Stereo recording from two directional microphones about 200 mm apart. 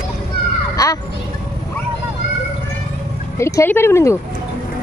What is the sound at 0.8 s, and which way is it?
Speech, 15° left (ahead or behind).